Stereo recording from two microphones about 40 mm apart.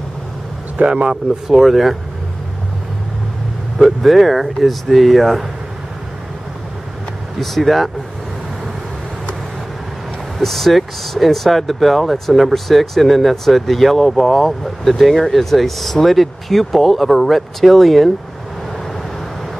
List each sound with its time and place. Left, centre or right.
0.7 s speech: right
1.5 s speech: centre
3.7 s speech: centre
7.3 s speech: centre
10.4 s speech: centre